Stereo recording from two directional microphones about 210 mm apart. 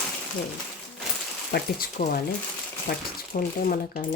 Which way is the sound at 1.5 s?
45° left (ahead or behind).